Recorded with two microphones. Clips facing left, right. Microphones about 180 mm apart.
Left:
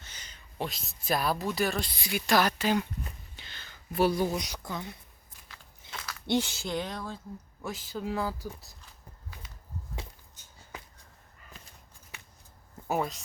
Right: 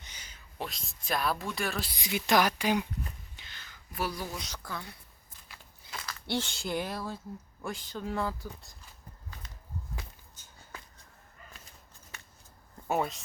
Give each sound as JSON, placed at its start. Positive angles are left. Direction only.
{"t": 0.0, "sound": "a sound", "side_deg": -10}
{"t": 0.7, "sound": "speech", "side_deg": 5}
{"t": 1.9, "sound": "speech", "side_deg": -20}
{"t": 3.3, "sound": "a sound", "side_deg": 30}
{"t": 4.4, "sound": "speech", "side_deg": 15}
{"t": 5.4, "sound": "a sound", "side_deg": 10}
{"t": 5.9, "sound": "biting", "side_deg": 0}
{"t": 6.2, "sound": "speech", "side_deg": 15}
{"t": 6.5, "sound": "speech", "side_deg": 0}
{"t": 7.6, "sound": "speech", "side_deg": 5}
{"t": 12.9, "sound": "speech", "side_deg": 0}